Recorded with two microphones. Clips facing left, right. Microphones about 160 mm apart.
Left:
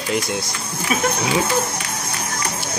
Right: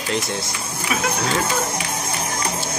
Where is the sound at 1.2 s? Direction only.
10° left (ahead or behind).